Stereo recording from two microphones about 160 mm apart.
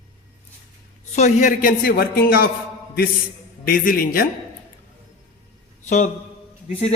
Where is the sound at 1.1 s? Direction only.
50° left (ahead or behind); by 2.5 s 65° left (ahead or behind).